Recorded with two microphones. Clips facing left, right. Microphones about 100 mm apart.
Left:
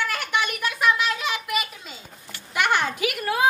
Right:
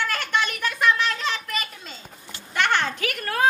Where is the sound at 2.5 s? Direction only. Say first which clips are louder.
Even; 10° left (ahead or behind).